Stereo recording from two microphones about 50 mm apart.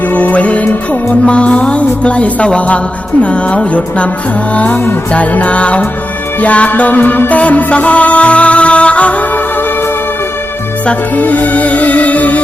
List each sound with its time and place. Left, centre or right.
0.1 s music: left
11.2 s music: left